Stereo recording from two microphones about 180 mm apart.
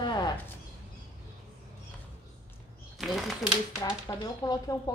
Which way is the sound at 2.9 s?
Centre (ahead or behind).